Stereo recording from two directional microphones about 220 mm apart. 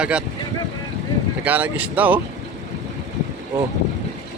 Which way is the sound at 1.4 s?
5° right (ahead or behind).